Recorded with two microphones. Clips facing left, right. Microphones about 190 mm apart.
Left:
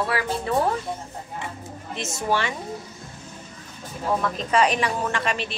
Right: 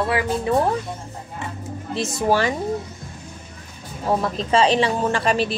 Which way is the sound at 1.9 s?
35° right (ahead or behind).